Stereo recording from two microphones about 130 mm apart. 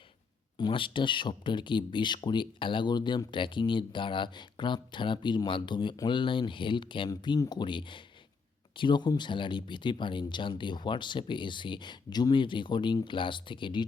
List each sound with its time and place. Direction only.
0.6 s speech: 40° left (ahead or behind)